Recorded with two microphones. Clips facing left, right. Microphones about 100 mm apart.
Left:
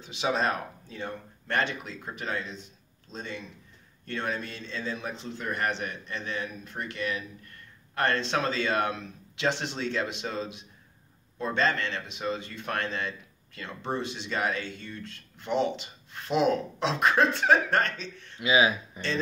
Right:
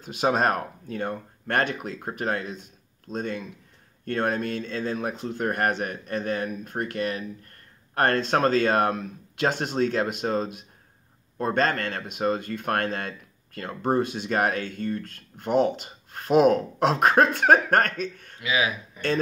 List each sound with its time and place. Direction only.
0.0 s speech: 50° right (ahead or behind)
18.4 s speech: 25° left (ahead or behind)